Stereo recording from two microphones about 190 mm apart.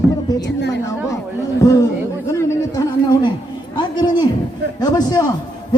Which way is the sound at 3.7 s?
25° left (ahead or behind).